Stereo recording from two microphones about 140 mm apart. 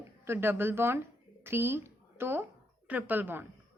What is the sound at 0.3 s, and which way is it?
A woman's voice, 15° right (ahead or behind).